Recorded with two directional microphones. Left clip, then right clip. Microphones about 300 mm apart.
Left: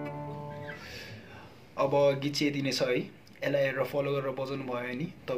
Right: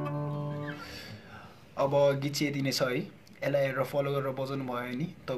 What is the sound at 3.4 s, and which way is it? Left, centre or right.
Speech, centre.